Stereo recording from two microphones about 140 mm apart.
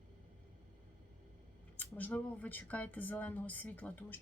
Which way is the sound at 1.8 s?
10° left (ahead or behind).